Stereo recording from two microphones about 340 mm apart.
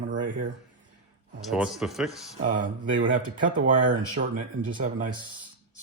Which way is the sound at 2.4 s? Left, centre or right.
Right.